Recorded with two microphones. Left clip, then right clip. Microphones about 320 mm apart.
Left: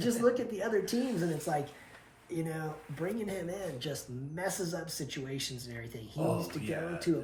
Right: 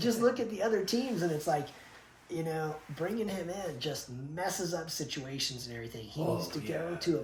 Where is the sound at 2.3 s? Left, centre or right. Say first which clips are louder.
Right 3 dB; centre.